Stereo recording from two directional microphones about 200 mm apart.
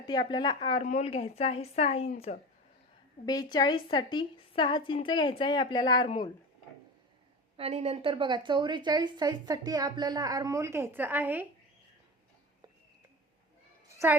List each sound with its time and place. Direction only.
0.0 s a woman's voice: 20° left (ahead or behind)
3.2 s a woman's voice: 20° left (ahead or behind)
7.5 s a woman's voice: 30° right (ahead or behind); by 11.4 s 10° right (ahead or behind)